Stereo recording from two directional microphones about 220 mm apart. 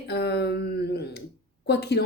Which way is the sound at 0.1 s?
50° left (ahead or behind).